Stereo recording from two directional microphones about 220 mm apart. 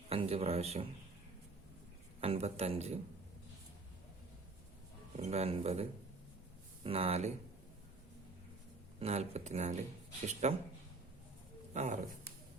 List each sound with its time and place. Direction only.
0.1 s a man's voice: 25° right (ahead or behind)
2.2 s speech: 25° right (ahead or behind)
5.1 s speech: 30° right (ahead or behind)
9.0 s speech: 30° right (ahead or behind)
11.7 s speech: 30° right (ahead or behind)